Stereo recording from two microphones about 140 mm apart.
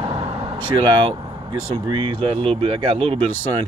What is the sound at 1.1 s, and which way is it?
Speech, 35° right (ahead or behind).